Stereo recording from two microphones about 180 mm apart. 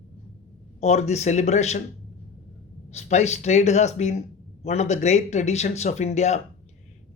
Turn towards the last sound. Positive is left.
turn(degrees=40)  # may be behind; listen again after turning